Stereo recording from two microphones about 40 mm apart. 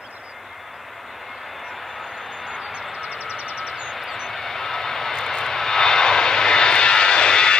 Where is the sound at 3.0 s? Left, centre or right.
Right.